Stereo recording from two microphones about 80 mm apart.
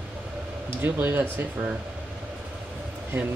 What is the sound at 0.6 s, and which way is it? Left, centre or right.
Speech, right.